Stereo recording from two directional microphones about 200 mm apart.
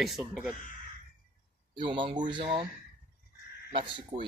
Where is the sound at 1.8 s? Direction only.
25° right (ahead or behind).